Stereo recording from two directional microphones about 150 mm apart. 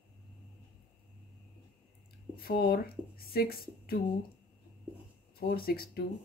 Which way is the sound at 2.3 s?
90° left.